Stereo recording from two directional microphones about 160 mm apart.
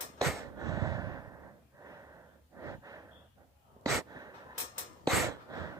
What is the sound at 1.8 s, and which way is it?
Snort, 20° right (ahead or behind).